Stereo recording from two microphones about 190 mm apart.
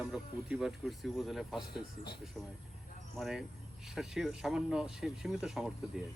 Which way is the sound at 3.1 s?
Centre (ahead or behind).